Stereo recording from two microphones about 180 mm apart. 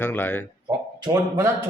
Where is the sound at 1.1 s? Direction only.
15° right (ahead or behind).